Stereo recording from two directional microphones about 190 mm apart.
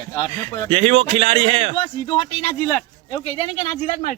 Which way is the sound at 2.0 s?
25° left (ahead or behind).